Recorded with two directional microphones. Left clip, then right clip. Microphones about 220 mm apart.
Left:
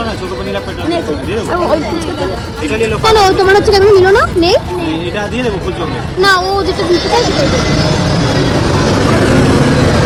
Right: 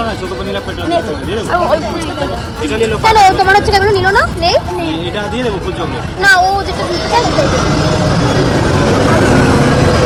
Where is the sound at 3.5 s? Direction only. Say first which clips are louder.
Left 2 dB; 20° left (ahead or behind).